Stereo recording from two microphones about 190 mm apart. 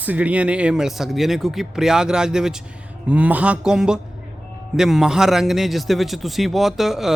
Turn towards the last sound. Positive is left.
turn(degrees=0)  # may be behind; listen again after turning